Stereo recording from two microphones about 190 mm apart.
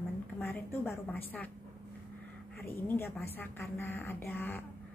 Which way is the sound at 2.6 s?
10° left (ahead or behind).